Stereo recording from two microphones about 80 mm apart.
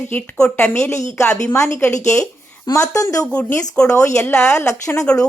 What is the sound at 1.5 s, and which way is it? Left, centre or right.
Speech, left.